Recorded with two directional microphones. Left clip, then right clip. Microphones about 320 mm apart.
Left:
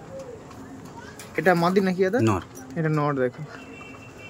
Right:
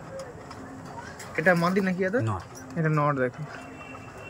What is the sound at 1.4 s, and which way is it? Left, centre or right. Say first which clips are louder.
Speech: left 3 dB; centre.